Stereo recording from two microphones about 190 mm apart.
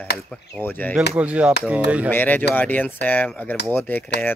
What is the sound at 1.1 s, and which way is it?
Speech, 5° right (ahead or behind).